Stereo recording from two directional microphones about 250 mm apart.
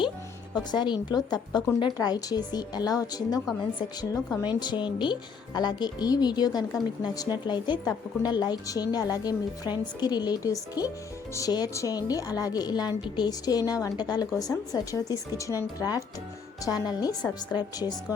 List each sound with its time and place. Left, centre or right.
0.5 s a woman's voice: centre